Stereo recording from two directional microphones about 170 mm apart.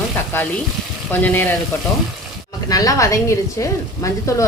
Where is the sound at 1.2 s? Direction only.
10° left (ahead or behind).